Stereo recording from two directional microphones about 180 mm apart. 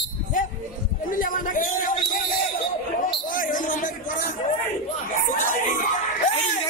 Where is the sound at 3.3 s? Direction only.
50° left (ahead or behind).